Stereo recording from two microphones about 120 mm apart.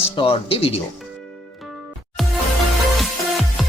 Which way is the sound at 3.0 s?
Centre (ahead or behind).